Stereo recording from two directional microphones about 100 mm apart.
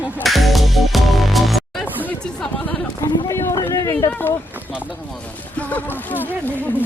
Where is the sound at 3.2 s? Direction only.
30° left (ahead or behind).